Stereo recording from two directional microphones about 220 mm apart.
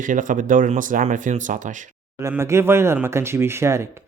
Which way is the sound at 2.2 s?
10° right (ahead or behind).